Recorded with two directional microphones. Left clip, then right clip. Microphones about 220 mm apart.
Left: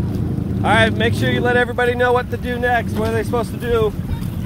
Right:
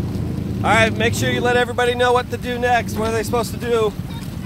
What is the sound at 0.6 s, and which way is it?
Speech, 10° right (ahead or behind).